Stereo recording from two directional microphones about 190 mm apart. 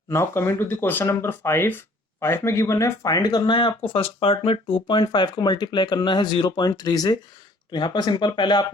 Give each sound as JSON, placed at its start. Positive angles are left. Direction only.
{"t": 0.1, "sound": "speech", "side_deg": 15}